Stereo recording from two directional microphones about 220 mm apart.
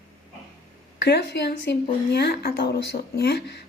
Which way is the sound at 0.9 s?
50° left (ahead or behind).